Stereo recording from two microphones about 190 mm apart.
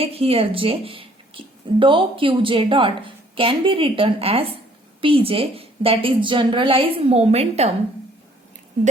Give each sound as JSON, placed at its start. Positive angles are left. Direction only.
{"t": 0.0, "sound": "speech", "side_deg": -30}